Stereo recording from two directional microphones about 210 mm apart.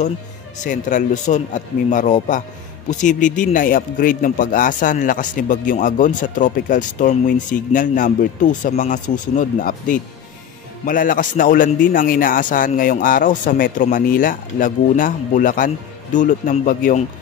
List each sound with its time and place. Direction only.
0.7 s a man's voice: 35° left (ahead or behind)